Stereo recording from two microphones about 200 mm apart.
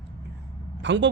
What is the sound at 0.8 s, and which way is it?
Speech, 60° right (ahead or behind).